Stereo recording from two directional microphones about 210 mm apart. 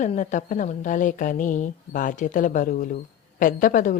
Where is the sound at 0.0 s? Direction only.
35° left (ahead or behind).